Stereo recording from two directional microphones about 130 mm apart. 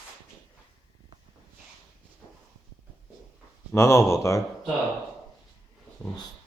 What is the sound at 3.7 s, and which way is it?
Speech, 20° left (ahead or behind).